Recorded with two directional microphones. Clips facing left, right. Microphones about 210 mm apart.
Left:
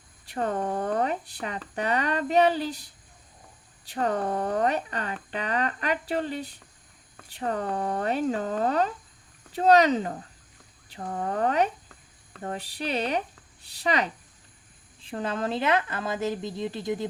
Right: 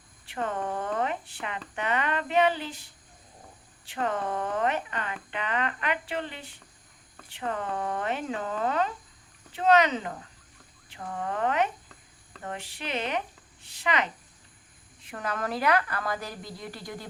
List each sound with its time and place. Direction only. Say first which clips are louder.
0.3 s a woman's voice: left 3 dB; 40° left (ahead or behind); by 17.1 s 20° left (ahead or behind)